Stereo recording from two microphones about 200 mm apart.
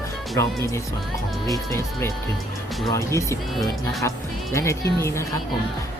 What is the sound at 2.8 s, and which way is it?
Speech, 15° left (ahead or behind).